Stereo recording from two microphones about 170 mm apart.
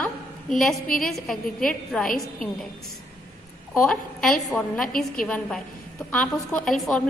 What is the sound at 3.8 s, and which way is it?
A woman's voice, 5° left (ahead or behind).